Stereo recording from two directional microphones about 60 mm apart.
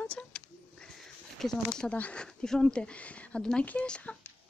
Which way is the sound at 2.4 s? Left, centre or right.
Centre.